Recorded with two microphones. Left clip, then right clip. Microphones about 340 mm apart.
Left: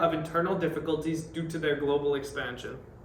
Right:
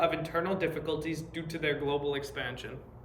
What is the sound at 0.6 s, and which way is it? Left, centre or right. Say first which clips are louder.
Speech: left 3 dB; right.